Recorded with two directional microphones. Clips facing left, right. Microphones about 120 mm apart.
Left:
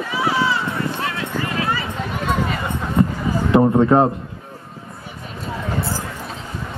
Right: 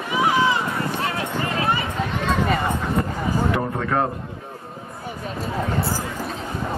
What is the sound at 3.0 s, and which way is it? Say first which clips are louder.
Music: left 12 dB; 25° left (ahead or behind).